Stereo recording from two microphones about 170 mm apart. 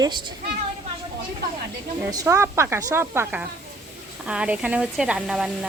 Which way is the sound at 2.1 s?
20° right (ahead or behind).